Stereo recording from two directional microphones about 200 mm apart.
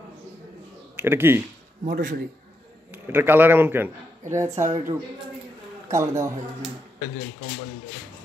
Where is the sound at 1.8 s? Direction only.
40° right (ahead or behind).